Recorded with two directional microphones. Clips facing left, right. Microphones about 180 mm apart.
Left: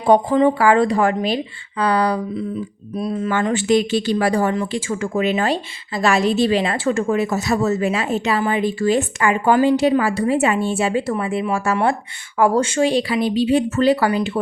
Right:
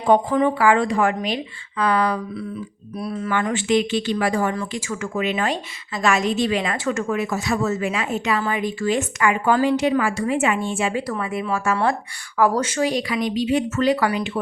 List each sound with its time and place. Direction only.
0.3 s speech: 25° left (ahead or behind)
0.6 s a woman's voice: 40° left (ahead or behind)
3.0 s speech: 20° left (ahead or behind)
3.5 s a woman's voice: 40° left (ahead or behind)